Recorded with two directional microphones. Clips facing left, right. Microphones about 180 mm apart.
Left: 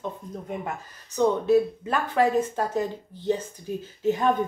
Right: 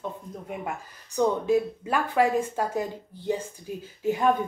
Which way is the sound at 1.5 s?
10° right (ahead or behind).